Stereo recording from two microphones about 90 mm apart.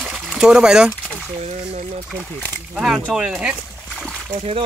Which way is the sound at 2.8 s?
5° right (ahead or behind).